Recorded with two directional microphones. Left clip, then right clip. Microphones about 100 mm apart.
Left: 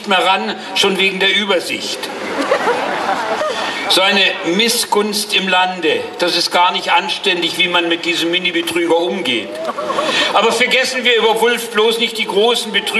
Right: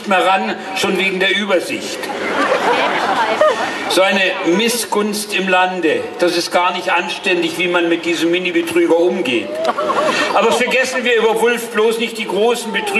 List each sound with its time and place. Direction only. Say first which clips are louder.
0.1 s a man's voice: even; 20° left (ahead or behind)
3.9 s a man's voice: left 1 dB; 15° left (ahead or behind)